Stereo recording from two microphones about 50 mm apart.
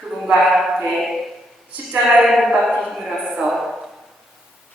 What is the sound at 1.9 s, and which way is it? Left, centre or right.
Speech, centre.